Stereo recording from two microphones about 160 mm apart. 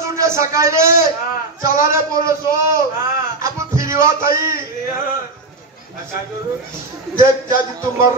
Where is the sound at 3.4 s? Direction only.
20° right (ahead or behind).